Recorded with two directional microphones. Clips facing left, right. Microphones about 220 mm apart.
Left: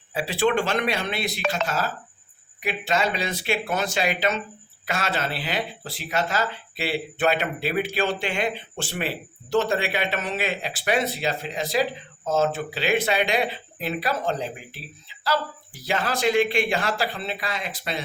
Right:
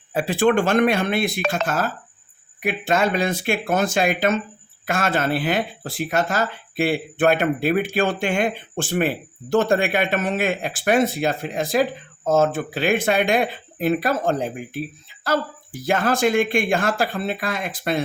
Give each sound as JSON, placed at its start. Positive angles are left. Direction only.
{"t": 0.1, "sound": "speech", "side_deg": -50}